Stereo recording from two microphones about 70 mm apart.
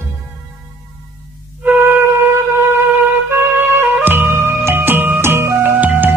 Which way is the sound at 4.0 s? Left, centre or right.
Right.